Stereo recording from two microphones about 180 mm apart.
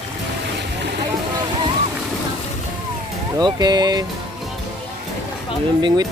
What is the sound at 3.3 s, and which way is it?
Speech, 20° right (ahead or behind).